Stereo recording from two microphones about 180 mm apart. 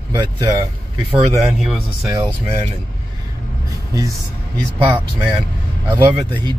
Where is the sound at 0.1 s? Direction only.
25° right (ahead or behind).